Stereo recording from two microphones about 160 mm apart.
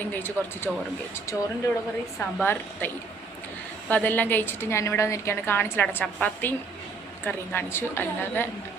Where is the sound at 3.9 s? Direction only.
10° left (ahead or behind).